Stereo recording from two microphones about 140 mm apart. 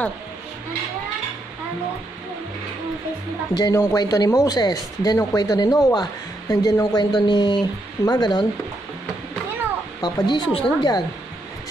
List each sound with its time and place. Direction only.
3.5 s speech: 25° left (ahead or behind)
10.0 s speech: 35° left (ahead or behind)